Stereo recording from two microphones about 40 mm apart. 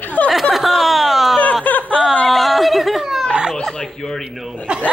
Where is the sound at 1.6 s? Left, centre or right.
Left.